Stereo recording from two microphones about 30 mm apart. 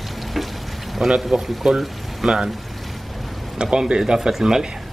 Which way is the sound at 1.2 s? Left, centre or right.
Centre.